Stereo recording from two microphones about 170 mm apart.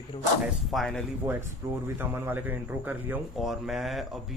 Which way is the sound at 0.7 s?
5° left (ahead or behind).